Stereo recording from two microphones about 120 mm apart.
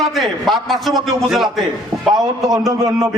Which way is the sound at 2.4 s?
25° right (ahead or behind).